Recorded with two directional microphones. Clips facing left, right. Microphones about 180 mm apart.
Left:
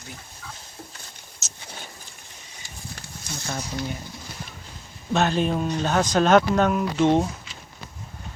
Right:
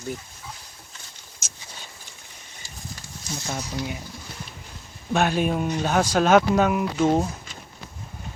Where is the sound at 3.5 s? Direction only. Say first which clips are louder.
Even; 10° right (ahead or behind).